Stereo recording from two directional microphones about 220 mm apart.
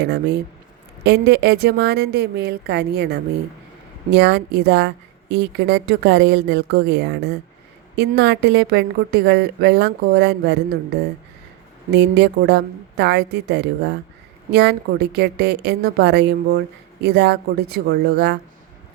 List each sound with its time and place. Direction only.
0.0 s a woman's voice: 50° right (ahead or behind)
11.9 s a woman's voice: 50° right (ahead or behind)